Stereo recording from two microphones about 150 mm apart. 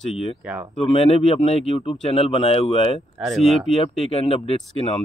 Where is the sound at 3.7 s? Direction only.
40° left (ahead or behind).